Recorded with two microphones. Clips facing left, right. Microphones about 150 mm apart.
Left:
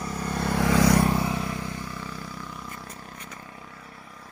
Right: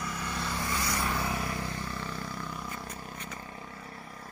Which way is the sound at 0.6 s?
85° left.